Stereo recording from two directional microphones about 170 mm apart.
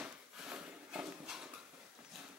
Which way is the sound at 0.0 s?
5° right (ahead or behind).